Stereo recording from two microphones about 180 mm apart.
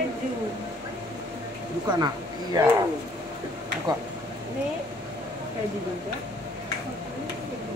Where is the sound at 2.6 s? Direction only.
20° right (ahead or behind).